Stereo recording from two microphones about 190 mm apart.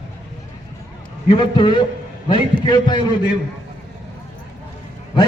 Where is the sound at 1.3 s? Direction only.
25° left (ahead or behind).